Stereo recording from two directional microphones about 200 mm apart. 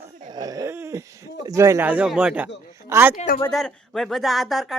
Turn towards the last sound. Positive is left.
turn(degrees=0)  # may be behind; listen again after turning